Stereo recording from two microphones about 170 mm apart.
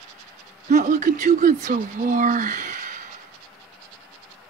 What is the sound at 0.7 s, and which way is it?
Speech, 45° right (ahead or behind).